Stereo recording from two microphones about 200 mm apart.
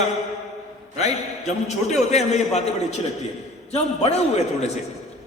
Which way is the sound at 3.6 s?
30° left (ahead or behind).